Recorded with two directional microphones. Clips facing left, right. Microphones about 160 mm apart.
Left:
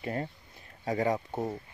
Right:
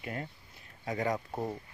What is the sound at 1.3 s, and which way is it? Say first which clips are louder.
Speech: left 2 dB; centre (ahead or behind).